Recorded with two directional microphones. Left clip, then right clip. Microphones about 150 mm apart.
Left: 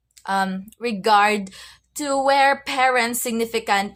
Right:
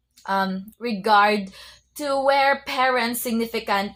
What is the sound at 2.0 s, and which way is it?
Speech, 15° left (ahead or behind).